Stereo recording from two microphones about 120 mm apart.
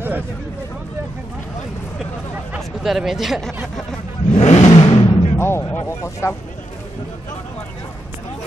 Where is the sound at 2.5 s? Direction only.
Centre (ahead or behind).